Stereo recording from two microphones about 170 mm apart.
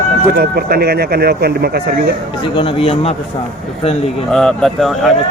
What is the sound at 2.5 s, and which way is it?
Speech, 35° left (ahead or behind).